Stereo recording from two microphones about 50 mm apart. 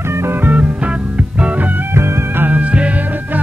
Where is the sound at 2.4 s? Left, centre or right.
Right.